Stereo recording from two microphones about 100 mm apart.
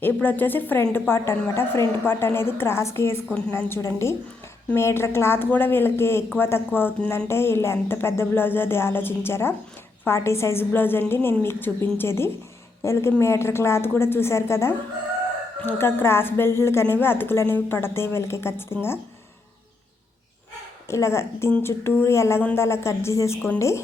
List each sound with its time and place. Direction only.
0.0 s a woman's voice: 20° left (ahead or behind)
20.8 s a woman's voice: 25° left (ahead or behind)